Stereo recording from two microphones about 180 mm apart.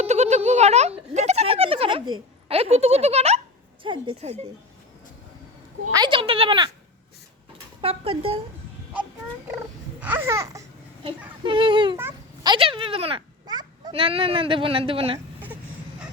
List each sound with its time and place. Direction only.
0.0 s a sound: 40° right (ahead or behind)
3.8 s a woman's voice: 30° right (ahead or behind)
5.9 s speech: 25° right (ahead or behind)
7.8 s a woman's voice: 30° right (ahead or behind)
10.0 s speech: 10° right (ahead or behind)
11.4 s speech: 30° right (ahead or behind)
11.9 s a sound: 10° right (ahead or behind)
12.5 s a child's voice: 30° right (ahead or behind)